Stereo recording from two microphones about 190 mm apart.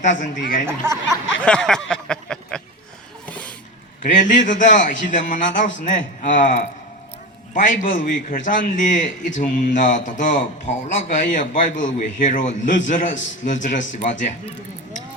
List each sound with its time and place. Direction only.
0.0 s a man's voice: 40° left (ahead or behind)
0.8 s speech: 15° right (ahead or behind)
1.5 s a sound: 5° left (ahead or behind)
4.0 s a man's voice: 40° left (ahead or behind)